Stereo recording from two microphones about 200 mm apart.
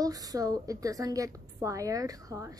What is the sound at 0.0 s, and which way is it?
A woman's voice, 20° right (ahead or behind).